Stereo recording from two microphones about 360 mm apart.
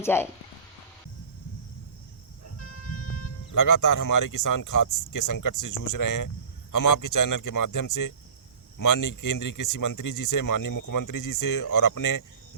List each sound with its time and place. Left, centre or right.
0.0 s speech: centre
2.4 s car alarm: left
3.5 s speech: left